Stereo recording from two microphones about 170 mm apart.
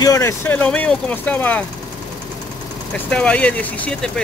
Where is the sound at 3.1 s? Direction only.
5° left (ahead or behind).